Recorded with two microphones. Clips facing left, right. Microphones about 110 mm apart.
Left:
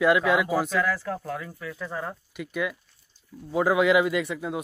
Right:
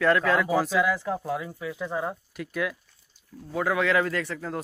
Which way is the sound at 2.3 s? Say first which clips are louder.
Left 3 dB; centre (ahead or behind).